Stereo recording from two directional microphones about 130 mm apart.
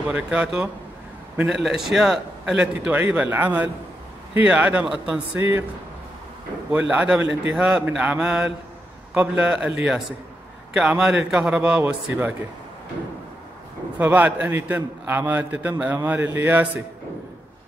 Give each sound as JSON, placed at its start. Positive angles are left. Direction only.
{"t": 0.0, "sound": "a man's voice", "side_deg": -10}
{"t": 6.7, "sound": "a man's voice", "side_deg": -10}
{"t": 11.8, "sound": "a man's voice", "side_deg": -15}
{"t": 13.9, "sound": "a man's voice", "side_deg": -15}